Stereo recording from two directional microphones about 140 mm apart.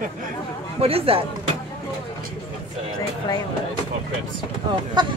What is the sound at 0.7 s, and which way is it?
Speech, 45° right (ahead or behind).